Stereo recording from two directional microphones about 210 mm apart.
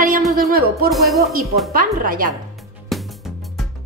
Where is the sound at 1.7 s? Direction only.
40° right (ahead or behind).